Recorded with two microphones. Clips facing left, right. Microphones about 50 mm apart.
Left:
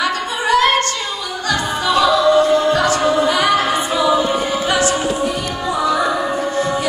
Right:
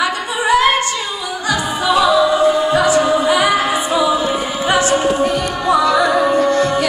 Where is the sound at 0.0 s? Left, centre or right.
Centre.